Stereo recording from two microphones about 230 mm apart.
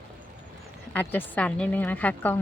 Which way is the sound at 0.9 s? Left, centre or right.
Centre.